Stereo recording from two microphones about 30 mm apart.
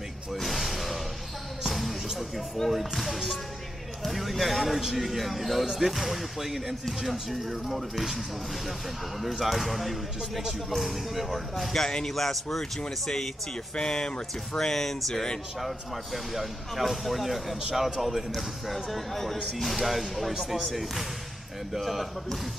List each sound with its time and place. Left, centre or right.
0.3 s music: centre
2.7 s speech: centre
9.4 s speech: centre
11.7 s speech: left
12.1 s a man's voice: centre
15.6 s speech: centre
17.7 s speech: centre
18.0 s speech: centre
21.7 s speech: centre